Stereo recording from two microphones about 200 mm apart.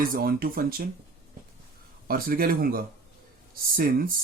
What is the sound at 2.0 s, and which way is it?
Speech, 45° right (ahead or behind).